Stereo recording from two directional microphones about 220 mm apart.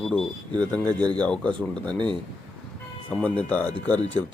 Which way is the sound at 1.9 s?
20° right (ahead or behind).